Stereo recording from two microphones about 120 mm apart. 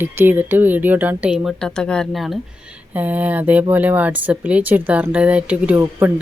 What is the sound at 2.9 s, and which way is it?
Speech, 15° right (ahead or behind).